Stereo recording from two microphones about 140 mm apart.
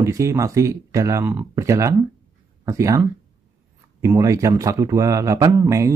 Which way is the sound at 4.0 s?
20° right (ahead or behind).